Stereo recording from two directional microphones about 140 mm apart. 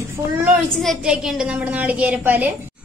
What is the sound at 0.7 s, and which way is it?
A woman's voice, centre (ahead or behind).